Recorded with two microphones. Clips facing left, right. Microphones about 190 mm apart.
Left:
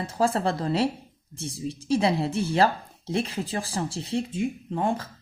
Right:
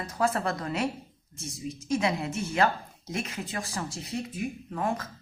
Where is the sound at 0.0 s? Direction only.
30° left (ahead or behind).